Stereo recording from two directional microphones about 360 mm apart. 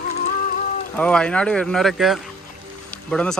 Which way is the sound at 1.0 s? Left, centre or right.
Centre.